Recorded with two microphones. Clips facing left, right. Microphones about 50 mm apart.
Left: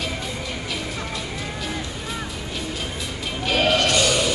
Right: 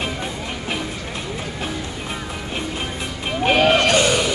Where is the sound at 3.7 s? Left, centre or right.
Right.